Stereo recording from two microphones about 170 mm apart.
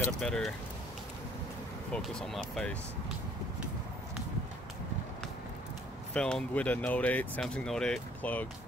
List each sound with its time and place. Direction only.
0.2 s speech: 5° left (ahead or behind)
1.9 s speech: 5° left (ahead or behind)
6.1 s speech: 5° left (ahead or behind)